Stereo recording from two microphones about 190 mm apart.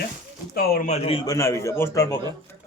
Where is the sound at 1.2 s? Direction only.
15° left (ahead or behind).